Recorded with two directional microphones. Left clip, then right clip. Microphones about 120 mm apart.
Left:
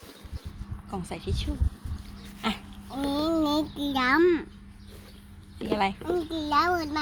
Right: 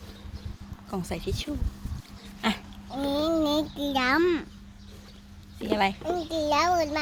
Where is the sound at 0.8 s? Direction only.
55° right (ahead or behind).